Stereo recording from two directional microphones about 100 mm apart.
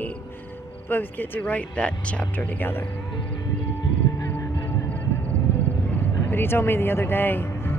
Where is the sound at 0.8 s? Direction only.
20° left (ahead or behind).